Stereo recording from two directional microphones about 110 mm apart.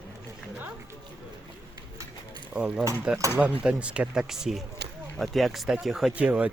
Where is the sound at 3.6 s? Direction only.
10° right (ahead or behind).